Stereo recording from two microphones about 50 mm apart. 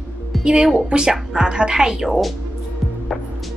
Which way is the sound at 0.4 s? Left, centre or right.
Centre.